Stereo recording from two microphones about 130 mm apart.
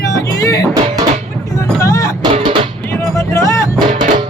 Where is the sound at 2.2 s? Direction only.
40° right (ahead or behind).